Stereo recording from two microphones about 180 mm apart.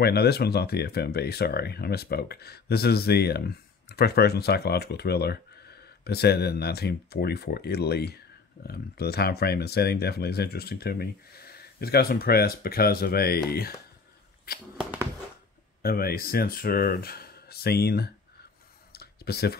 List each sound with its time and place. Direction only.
0.0 s speech: 60° left (ahead or behind)
14.8 s a sound: 5° right (ahead or behind)
15.8 s speech: 55° left (ahead or behind)
18.9 s clicking: 60° left (ahead or behind)